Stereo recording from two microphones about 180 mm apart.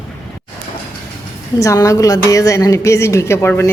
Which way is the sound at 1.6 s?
20° left (ahead or behind).